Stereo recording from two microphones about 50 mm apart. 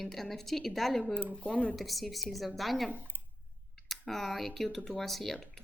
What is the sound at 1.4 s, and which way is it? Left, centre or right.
Speech, left.